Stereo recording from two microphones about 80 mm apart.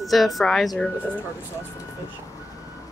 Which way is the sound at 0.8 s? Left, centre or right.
Centre.